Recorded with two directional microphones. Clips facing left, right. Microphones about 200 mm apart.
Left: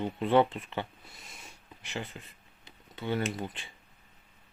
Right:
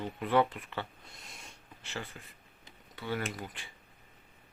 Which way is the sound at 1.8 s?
20° left (ahead or behind).